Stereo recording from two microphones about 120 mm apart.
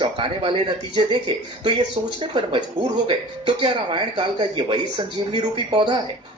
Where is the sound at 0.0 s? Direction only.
45° right (ahead or behind).